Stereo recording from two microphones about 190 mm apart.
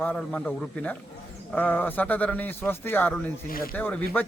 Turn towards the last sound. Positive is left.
turn(degrees=10)  # may be behind; listen again after turning